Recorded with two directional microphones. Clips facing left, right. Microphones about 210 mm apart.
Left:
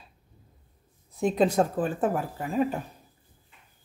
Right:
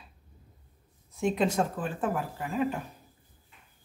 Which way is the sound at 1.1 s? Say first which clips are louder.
Left 4 dB; 35° left (ahead or behind).